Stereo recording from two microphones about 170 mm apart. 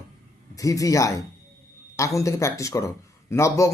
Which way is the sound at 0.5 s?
20° left (ahead or behind).